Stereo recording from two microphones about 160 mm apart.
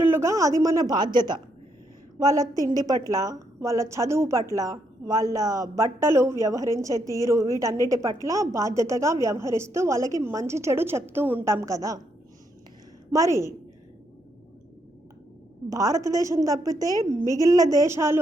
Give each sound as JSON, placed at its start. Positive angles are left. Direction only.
{"t": 0.0, "sound": "a woman's voice", "side_deg": -15}
{"t": 13.1, "sound": "a woman's voice", "side_deg": -20}
{"t": 15.7, "sound": "a woman's voice", "side_deg": -20}